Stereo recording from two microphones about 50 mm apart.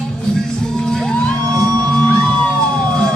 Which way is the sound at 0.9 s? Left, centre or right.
Centre.